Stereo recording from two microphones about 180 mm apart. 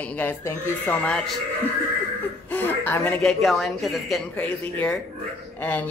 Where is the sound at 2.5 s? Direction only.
10° left (ahead or behind).